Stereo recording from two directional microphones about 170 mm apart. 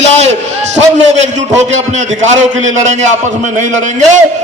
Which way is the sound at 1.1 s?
40° right (ahead or behind).